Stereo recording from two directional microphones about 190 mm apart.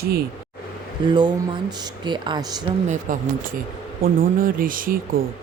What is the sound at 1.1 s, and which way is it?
Speech, 25° right (ahead or behind).